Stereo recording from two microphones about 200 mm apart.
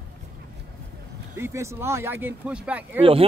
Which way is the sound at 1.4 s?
15° right (ahead or behind).